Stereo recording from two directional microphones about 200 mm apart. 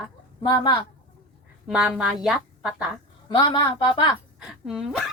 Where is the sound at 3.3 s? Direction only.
25° left (ahead or behind).